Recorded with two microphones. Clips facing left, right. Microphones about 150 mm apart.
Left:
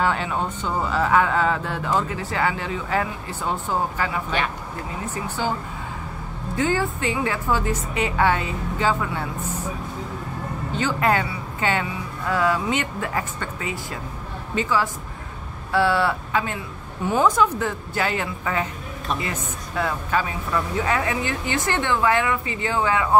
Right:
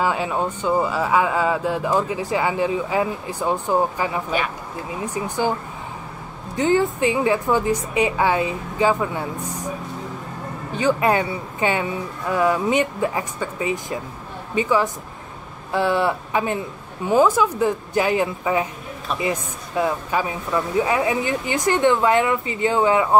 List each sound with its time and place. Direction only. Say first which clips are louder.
0.0 s speech: right 2 dB; 10° right (ahead or behind)
6.5 s speech: right 4 dB; 20° right (ahead or behind)
10.8 s speech: right 3 dB; 15° right (ahead or behind)